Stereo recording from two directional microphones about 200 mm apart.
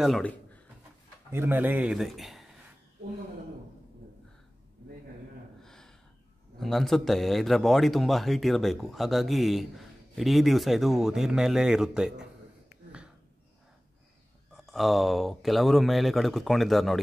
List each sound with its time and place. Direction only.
0.0 s speech: 5° left (ahead or behind)
1.3 s speech: 10° right (ahead or behind)
5.6 s a sound: centre (ahead or behind)
6.6 s speech: centre (ahead or behind)
14.5 s speech: centre (ahead or behind)